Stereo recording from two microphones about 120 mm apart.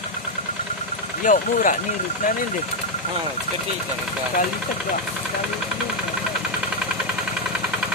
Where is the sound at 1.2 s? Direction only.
90° left.